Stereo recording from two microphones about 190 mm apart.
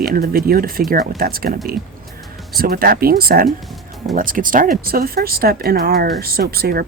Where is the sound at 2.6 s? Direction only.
50° right (ahead or behind).